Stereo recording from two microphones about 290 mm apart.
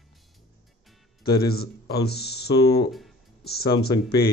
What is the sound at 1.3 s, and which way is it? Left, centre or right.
Speech, left.